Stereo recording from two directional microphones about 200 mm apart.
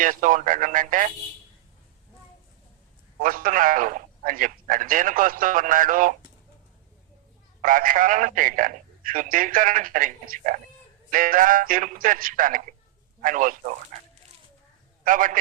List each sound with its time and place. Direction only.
0.0 s speech: 40° right (ahead or behind)
3.2 s a man's voice: 45° right (ahead or behind)
7.6 s a man's voice: 45° right (ahead or behind)
15.0 s a man's voice: 40° right (ahead or behind)